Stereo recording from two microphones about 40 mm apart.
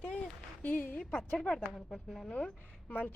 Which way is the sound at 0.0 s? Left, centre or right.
Left.